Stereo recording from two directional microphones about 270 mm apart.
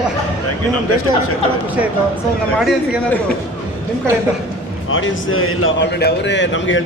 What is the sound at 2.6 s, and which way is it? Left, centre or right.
Speech, centre.